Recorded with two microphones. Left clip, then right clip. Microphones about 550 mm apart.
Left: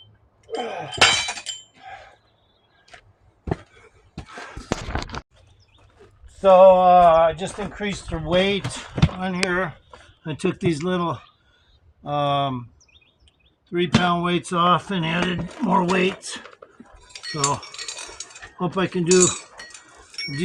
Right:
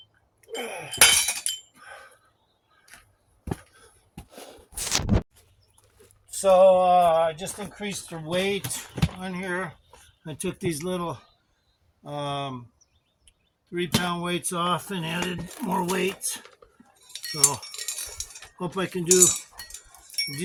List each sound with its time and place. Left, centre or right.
0.4 s breaking: right
6.4 s speech: right
13.7 s speech: right
17.1 s keys jangling: right
18.5 s speech: right